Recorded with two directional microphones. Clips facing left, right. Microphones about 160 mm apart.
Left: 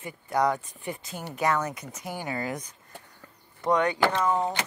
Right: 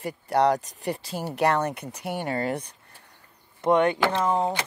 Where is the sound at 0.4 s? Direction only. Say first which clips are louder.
Right 4 dB; 80° right.